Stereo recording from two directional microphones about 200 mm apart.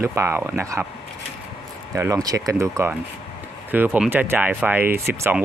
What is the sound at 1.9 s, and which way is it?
Speech, 15° right (ahead or behind).